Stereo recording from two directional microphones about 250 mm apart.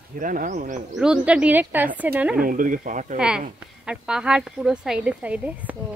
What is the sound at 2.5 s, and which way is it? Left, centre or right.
Speech, right.